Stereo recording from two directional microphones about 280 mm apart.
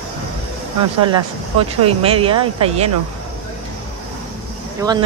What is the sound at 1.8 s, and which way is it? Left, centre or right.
Speech, centre.